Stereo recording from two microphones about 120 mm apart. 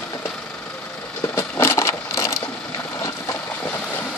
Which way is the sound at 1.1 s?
20° left (ahead or behind).